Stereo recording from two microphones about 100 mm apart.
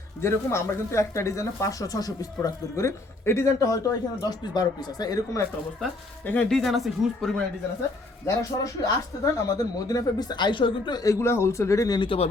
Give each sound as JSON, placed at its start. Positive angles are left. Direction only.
{"t": 0.2, "sound": "speech", "side_deg": 25}
{"t": 6.2, "sound": "speech", "side_deg": 15}
{"t": 6.5, "sound": "speech", "side_deg": 0}
{"t": 8.4, "sound": "speech", "side_deg": 35}
{"t": 11.9, "sound": "speech", "side_deg": 65}